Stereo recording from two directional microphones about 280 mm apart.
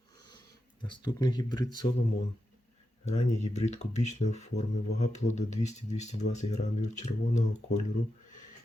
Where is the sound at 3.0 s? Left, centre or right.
Left.